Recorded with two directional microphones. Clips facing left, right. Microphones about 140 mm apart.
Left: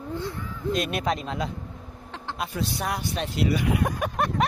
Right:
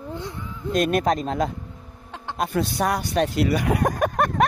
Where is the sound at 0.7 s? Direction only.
45° right (ahead or behind).